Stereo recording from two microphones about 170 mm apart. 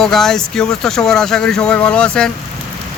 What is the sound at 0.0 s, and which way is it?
Speech, centre (ahead or behind).